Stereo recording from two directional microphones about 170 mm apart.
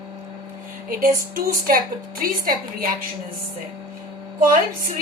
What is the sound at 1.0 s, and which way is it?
A woman's voice, 55° right (ahead or behind).